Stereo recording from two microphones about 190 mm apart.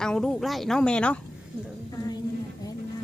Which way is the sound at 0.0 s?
5° left (ahead or behind).